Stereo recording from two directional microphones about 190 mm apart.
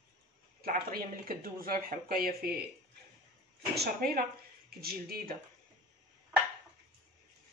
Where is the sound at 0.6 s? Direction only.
50° right (ahead or behind).